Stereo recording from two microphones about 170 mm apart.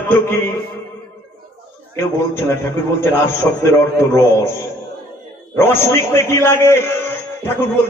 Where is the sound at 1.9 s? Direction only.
15° left (ahead or behind).